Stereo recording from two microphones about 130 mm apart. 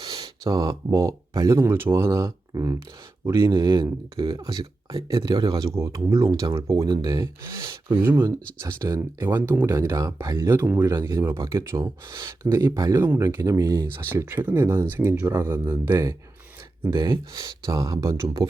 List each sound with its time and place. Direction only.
0.0 s speech: 30° right (ahead or behind)
3.5 s speech: 35° right (ahead or behind)
5.5 s speech: 25° right (ahead or behind)
7.9 s speech: 15° right (ahead or behind)
12.1 s speech: 30° right (ahead or behind)
12.5 s speech: 20° right (ahead or behind)
17.0 s speech: 35° right (ahead or behind)